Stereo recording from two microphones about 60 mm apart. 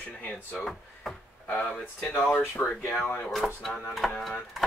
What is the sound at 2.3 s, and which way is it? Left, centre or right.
Speech, left.